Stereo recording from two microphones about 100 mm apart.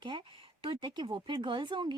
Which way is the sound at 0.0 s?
50° right (ahead or behind).